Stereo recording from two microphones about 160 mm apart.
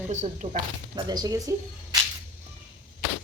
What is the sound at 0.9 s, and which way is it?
Speech, 25° right (ahead or behind).